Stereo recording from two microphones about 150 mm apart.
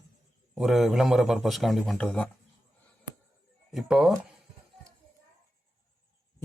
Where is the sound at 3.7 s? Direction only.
Centre (ahead or behind).